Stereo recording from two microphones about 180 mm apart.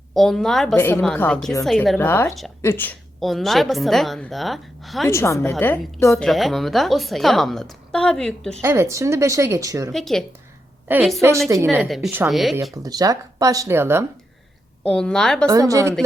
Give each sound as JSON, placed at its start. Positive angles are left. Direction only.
{"t": 0.1, "sound": "a woman's voice", "side_deg": 0}
{"t": 0.8, "sound": "a woman's voice", "side_deg": 10}
{"t": 2.0, "sound": "a woman's voice", "side_deg": 10}
{"t": 3.2, "sound": "a woman's voice", "side_deg": 0}
{"t": 5.0, "sound": "a woman's voice", "side_deg": 15}
{"t": 8.6, "sound": "speech", "side_deg": -15}
{"t": 9.9, "sound": "a woman's voice", "side_deg": 0}
{"t": 10.8, "sound": "a woman's voice", "side_deg": -10}
{"t": 12.3, "sound": "a woman's voice", "side_deg": 0}
{"t": 12.7, "sound": "speech", "side_deg": -20}
{"t": 14.8, "sound": "a woman's voice", "side_deg": 5}
{"t": 15.4, "sound": "speech", "side_deg": -20}